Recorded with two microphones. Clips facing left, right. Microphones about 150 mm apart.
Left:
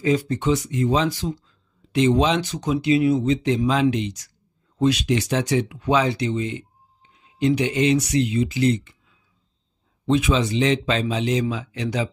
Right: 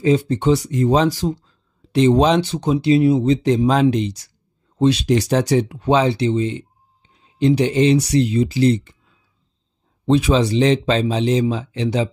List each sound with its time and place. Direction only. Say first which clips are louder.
0.0 s speech: right 4 dB; 25° right (ahead or behind)
10.0 s speech: right 4 dB; 35° right (ahead or behind)